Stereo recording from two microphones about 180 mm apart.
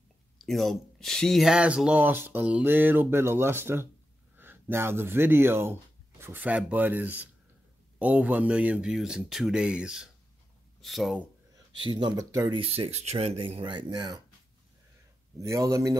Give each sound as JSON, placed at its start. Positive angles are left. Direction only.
{"t": 0.4, "sound": "speech", "side_deg": 0}
{"t": 11.8, "sound": "speech", "side_deg": -25}
{"t": 15.3, "sound": "speech", "side_deg": -15}